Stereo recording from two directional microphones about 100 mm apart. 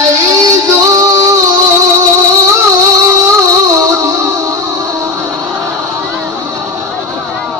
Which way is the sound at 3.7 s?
35° right (ahead or behind).